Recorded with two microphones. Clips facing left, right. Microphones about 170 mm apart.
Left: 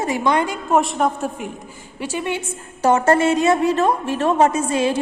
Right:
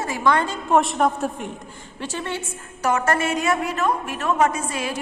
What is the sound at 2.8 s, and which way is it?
A woman's voice, 30° left (ahead or behind).